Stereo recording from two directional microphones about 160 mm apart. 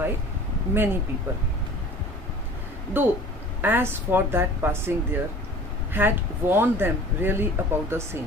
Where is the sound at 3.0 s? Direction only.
10° right (ahead or behind).